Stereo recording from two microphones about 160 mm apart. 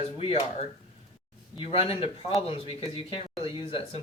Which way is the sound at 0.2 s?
35° left (ahead or behind).